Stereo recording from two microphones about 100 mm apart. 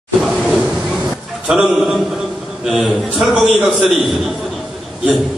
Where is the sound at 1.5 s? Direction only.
5° right (ahead or behind).